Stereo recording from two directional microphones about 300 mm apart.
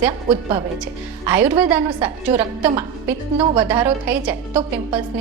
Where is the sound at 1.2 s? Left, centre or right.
Centre.